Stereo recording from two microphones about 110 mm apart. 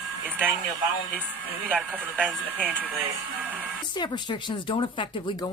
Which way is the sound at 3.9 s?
40° left (ahead or behind).